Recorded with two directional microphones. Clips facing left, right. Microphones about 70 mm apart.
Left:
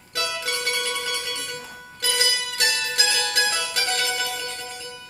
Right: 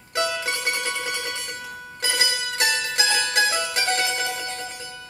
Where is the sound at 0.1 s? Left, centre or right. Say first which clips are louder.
Right 3 dB; right.